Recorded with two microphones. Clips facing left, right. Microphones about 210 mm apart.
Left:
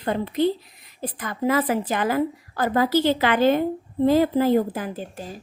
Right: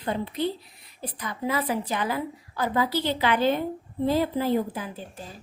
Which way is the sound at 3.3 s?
90° left.